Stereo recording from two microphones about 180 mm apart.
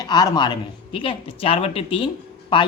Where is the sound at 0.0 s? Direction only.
20° left (ahead or behind).